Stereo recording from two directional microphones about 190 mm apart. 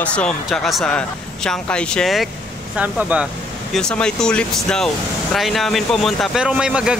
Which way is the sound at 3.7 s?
5° left (ahead or behind).